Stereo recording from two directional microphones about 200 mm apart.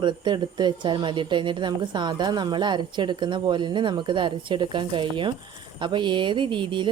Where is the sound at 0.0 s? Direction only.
20° right (ahead or behind).